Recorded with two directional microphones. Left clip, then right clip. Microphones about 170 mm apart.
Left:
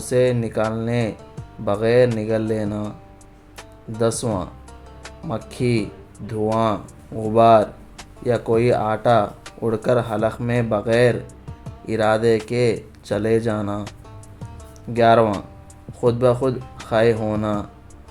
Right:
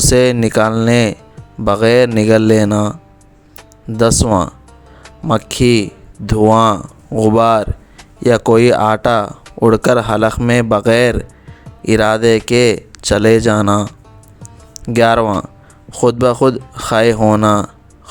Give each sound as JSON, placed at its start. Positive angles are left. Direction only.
{"t": 0.0, "sound": "speech", "side_deg": -55}
{"t": 3.9, "sound": "speech", "side_deg": -50}
{"t": 5.5, "sound": "speech", "side_deg": -50}